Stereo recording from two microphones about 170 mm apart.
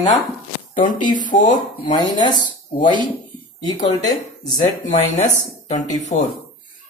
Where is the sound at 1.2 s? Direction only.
50° left (ahead or behind).